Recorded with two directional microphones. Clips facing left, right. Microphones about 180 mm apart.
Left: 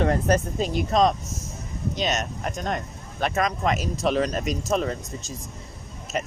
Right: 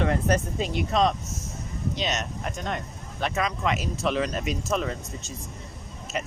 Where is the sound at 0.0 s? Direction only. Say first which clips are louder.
Left 3 dB; 40° left (ahead or behind).